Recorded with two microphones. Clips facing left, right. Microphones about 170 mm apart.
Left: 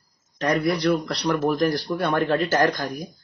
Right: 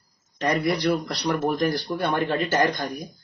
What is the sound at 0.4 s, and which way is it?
A man's voice, centre (ahead or behind).